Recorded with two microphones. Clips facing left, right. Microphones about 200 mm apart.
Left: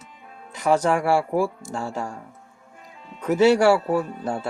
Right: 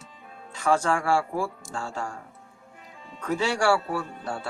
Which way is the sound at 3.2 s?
20° left (ahead or behind).